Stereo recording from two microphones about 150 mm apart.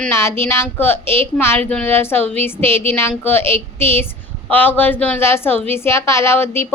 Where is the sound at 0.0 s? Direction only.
15° left (ahead or behind).